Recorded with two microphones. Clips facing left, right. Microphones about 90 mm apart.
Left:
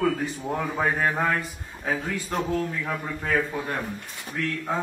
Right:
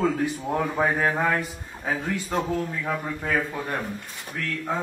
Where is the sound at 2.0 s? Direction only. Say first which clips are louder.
Right 2 dB; 20° right (ahead or behind).